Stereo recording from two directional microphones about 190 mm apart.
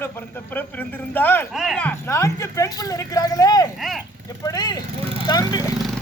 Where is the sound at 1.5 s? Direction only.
Centre (ahead or behind); by 5.6 s 20° left (ahead or behind).